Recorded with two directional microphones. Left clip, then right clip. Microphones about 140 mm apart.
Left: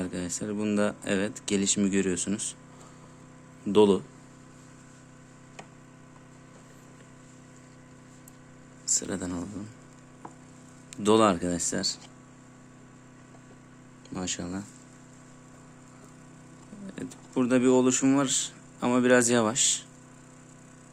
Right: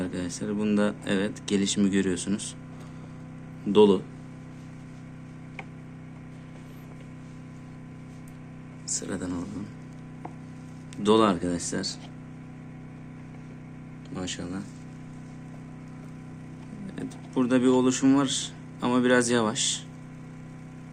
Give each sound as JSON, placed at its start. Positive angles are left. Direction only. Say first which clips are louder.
{"t": 0.0, "sound": "speech", "louder": "right 1 dB", "side_deg": 50}
{"t": 3.7, "sound": "speech", "louder": "right 2 dB", "side_deg": 55}
{"t": 8.9, "sound": "speech", "louder": "left 1 dB", "side_deg": 90}
{"t": 10.9, "sound": "speech", "louder": "even", "side_deg": 60}
{"t": 14.1, "sound": "speech", "louder": "even", "side_deg": 90}
{"t": 16.8, "sound": "speech", "louder": "right 2 dB", "side_deg": 50}